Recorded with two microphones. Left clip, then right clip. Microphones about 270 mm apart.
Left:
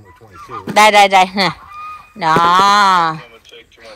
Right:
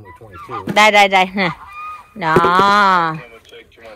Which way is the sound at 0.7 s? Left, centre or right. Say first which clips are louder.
Left 2 dB; centre.